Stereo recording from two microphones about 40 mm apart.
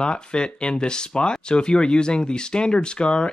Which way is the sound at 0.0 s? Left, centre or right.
Left.